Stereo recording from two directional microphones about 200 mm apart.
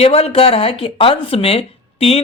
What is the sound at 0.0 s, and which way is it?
Speech, 30° left (ahead or behind).